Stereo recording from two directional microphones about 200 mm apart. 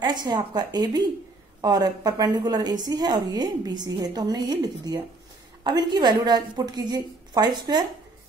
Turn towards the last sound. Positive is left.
turn(degrees=-20)  # may be behind; listen again after turning